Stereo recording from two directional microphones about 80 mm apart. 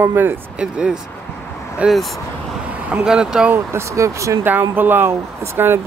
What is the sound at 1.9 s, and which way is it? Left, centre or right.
Speech, centre.